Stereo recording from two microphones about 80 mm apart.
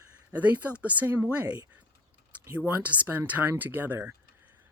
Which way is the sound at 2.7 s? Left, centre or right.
Right.